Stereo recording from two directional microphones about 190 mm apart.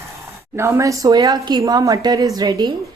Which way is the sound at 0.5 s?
15° right (ahead or behind).